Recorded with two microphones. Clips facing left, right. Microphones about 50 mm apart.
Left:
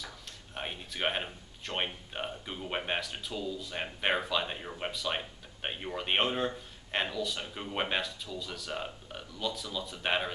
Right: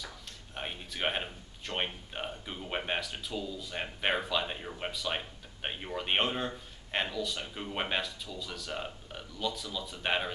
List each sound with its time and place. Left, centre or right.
0.6 s speech: centre